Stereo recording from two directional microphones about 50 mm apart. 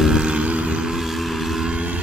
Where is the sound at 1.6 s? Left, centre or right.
Right.